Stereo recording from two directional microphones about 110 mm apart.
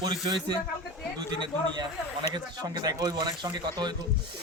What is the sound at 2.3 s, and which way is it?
Speech, 40° right (ahead or behind).